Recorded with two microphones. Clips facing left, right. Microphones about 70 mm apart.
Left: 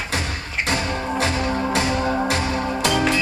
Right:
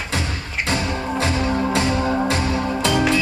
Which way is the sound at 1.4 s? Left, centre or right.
Centre.